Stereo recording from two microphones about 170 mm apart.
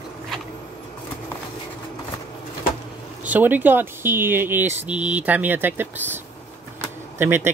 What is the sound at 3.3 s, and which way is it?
Speech, 10° right (ahead or behind).